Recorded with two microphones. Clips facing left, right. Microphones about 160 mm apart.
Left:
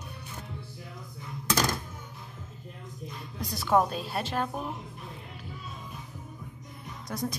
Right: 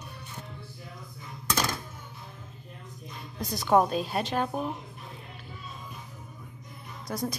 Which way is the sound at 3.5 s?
20° right (ahead or behind).